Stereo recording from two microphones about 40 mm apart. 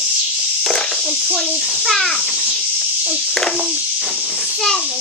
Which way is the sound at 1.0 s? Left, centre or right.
Centre.